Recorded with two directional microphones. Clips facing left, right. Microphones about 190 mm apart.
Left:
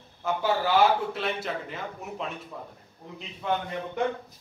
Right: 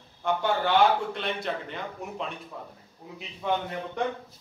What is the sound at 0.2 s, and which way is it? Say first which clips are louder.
A man's voice: even; 5° left (ahead or behind).